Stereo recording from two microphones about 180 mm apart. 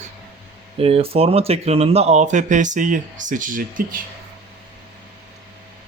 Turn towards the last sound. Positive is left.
turn(degrees=-50)  # may be behind; listen again after turning